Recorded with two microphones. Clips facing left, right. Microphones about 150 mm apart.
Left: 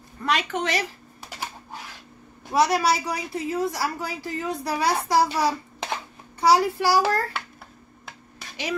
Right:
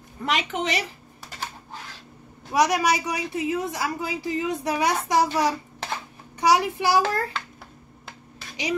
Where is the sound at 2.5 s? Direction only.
15° right (ahead or behind).